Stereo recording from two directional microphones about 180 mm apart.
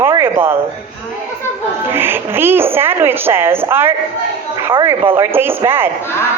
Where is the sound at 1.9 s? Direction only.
10° right (ahead or behind).